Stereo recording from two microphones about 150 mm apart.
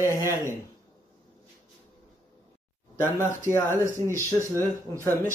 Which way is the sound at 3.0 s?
15° left (ahead or behind).